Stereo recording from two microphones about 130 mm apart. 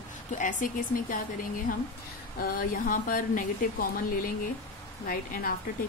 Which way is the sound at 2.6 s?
90° left.